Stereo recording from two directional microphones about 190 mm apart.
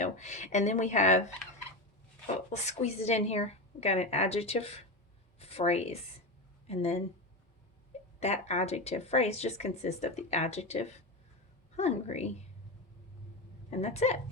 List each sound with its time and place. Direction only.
0.0 s speech: 40° left (ahead or behind)
2.2 s speech: 35° left (ahead or behind)
8.2 s speech: 35° left (ahead or behind)
13.7 s speech: 35° left (ahead or behind)